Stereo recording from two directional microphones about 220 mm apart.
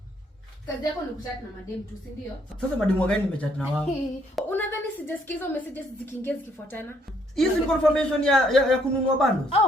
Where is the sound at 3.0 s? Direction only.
5° left (ahead or behind).